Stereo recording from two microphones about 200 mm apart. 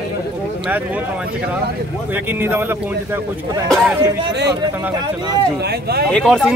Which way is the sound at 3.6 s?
Centre (ahead or behind).